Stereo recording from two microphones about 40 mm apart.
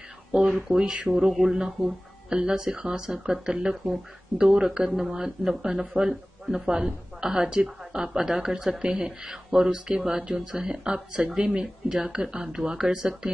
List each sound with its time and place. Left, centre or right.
0.3 s a woman's voice: centre
0.9 s speech: right
1.5 s a woman's voice: centre
11.9 s a woman's voice: centre